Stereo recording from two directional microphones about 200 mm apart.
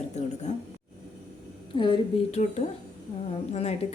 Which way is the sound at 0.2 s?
35° left (ahead or behind).